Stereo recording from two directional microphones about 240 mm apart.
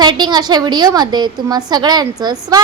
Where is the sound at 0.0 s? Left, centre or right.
Centre.